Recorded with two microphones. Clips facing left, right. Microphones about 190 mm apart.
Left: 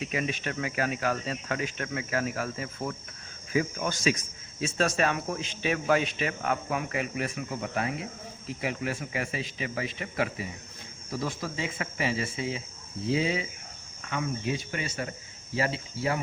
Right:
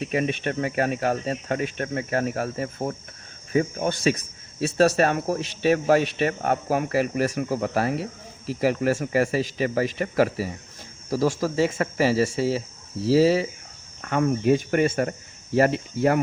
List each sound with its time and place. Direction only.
0.5 s speech: 35° right (ahead or behind)
14.0 s speech: 55° right (ahead or behind)